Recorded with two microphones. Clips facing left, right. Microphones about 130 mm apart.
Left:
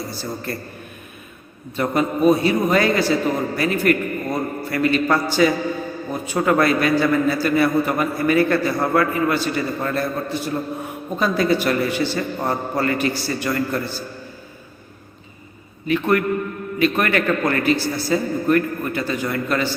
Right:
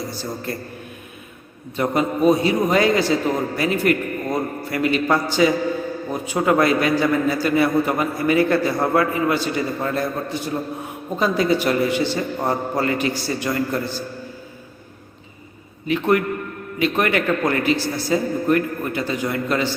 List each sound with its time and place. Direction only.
0.5 s a man's voice: 20° right (ahead or behind)
1.7 s a man's voice: 20° right (ahead or behind)
15.9 s a man's voice: 20° right (ahead or behind)